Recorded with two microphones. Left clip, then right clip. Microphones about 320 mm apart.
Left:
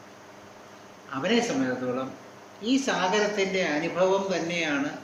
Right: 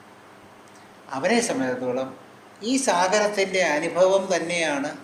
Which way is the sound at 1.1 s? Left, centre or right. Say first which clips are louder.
Right 3 dB; centre.